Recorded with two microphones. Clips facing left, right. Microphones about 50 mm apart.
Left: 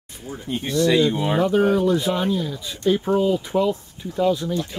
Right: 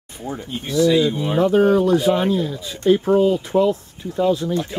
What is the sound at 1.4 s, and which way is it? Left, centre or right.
Speech, centre.